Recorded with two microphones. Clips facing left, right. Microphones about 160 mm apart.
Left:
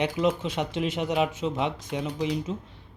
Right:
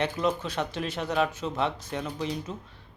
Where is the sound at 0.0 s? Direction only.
20° left (ahead or behind).